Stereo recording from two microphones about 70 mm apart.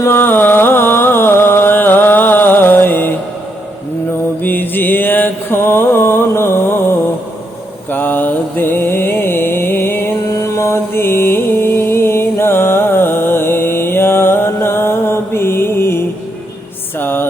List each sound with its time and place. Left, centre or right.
0.0 s music: left
4.4 s mantra: left
7.9 s mantra: left
10.4 s mantra: left
17.0 s music: left